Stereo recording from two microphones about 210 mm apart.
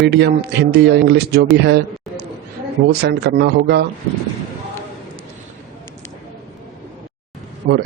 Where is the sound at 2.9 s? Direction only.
50° right (ahead or behind).